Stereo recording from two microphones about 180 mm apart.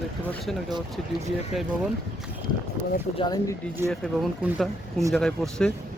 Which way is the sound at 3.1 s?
20° left (ahead or behind).